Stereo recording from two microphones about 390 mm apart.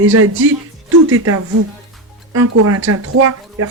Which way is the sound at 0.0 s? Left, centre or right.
Right.